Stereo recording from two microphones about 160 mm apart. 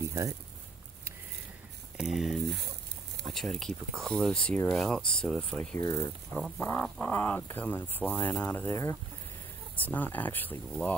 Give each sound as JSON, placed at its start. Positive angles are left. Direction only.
{"t": 0.0, "sound": "a sound", "side_deg": -20}
{"t": 2.0, "sound": "speech", "side_deg": 0}
{"t": 5.8, "sound": "speech", "side_deg": 20}
{"t": 6.3, "sound": "speech", "side_deg": 10}